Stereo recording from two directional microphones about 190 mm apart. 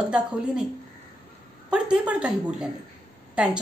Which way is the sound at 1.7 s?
5° right (ahead or behind).